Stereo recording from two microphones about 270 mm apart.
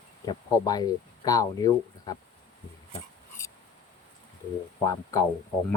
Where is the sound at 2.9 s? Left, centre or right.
Centre.